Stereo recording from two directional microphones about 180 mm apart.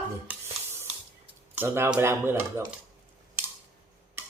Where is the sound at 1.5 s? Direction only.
15° right (ahead or behind).